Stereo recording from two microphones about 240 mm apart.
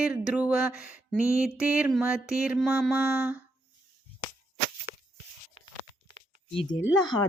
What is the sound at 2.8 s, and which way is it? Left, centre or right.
Speech, centre.